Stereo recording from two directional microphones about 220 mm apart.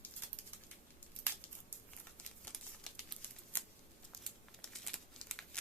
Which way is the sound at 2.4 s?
5° left (ahead or behind).